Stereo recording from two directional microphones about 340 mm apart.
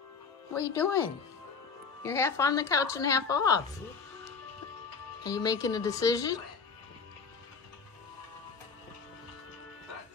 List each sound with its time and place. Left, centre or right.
0.6 s speech: centre
2.0 s speech: centre
5.2 s speech: centre